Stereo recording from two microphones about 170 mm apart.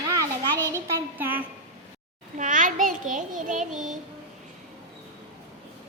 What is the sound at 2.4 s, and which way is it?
A child's voice, 50° right (ahead or behind).